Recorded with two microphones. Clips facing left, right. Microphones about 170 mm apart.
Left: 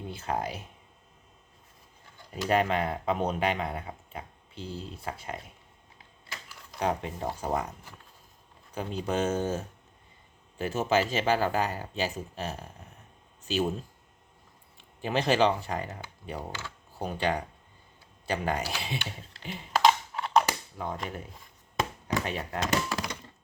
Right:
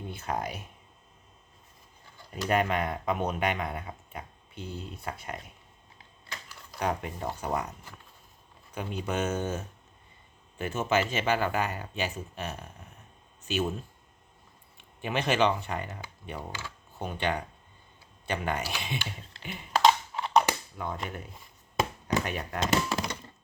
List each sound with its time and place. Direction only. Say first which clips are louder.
0.1 s speech: left 1 dB; 30° left (ahead or behind)
2.5 s speech: left 1 dB; 30° left (ahead or behind)
6.3 s a sound: even; 30° left (ahead or behind)
7.4 s speech: left 1 dB; 30° left (ahead or behind)
8.7 s speech: left 2 dB; 35° left (ahead or behind)
15.0 s speech: left 2 dB; 35° left (ahead or behind)
16.5 s speech: left 1 dB; 10° right (ahead or behind)
17.0 s speech: left 2 dB; 35° left (ahead or behind)
19.7 s typing: even; centre (ahead or behind)
20.8 s speech: even; 30° left (ahead or behind)
22.2 s speech: even; 30° left (ahead or behind)
22.6 s speech: right 2 dB; 25° right (ahead or behind)